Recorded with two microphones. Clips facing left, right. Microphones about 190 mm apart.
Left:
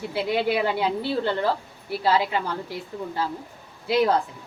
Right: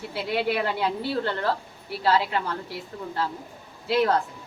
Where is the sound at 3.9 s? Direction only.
15° left (ahead or behind).